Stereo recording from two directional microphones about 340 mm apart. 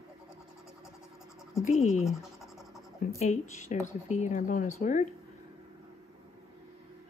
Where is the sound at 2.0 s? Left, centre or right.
Centre.